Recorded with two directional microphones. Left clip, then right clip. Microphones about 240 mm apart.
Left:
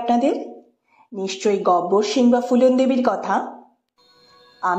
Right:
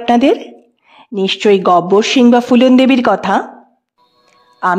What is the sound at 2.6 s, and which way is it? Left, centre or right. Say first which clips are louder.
Speech: right 7 dB; right.